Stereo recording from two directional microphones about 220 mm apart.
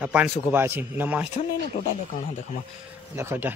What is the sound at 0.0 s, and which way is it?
Speech, 5° right (ahead or behind).